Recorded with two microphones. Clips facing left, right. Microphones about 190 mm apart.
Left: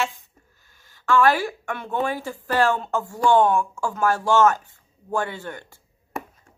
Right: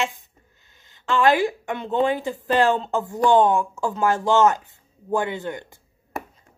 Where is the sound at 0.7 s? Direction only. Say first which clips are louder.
Left 3 dB; 20° right (ahead or behind).